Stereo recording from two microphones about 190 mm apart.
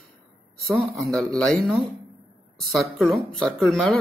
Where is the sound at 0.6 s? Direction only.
10° right (ahead or behind).